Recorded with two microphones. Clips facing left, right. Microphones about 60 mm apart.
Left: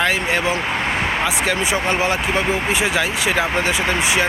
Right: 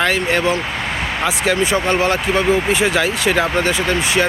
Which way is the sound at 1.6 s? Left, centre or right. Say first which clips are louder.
Right 5 dB; centre.